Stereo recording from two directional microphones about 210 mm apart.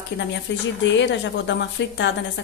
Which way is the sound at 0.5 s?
60° left (ahead or behind).